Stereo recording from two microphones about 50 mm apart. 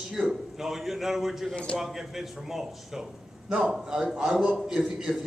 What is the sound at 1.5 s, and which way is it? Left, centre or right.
Speech, left.